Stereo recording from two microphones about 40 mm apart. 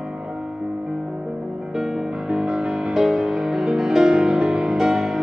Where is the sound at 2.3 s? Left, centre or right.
Right.